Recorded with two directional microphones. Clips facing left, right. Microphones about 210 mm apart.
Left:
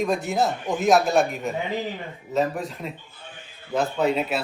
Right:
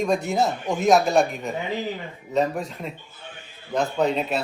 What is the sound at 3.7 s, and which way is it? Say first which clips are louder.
Speech: even; 5° left (ahead or behind).